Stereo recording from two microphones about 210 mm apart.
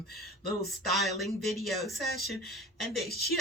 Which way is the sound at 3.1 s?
45° left (ahead or behind).